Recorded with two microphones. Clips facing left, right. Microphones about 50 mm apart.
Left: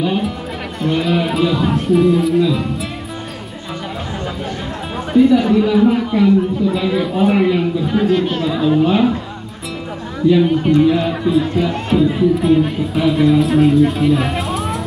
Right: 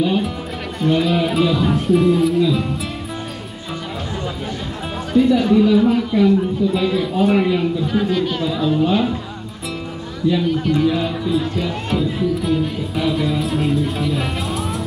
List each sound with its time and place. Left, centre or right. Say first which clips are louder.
0.7 s speech: even; centre
5.1 s speech: left 3 dB; centre
10.3 s speech: left 6 dB; left; by 14.8 s centre